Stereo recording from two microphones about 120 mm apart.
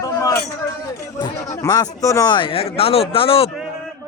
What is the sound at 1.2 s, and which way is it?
Speech, 30° left (ahead or behind).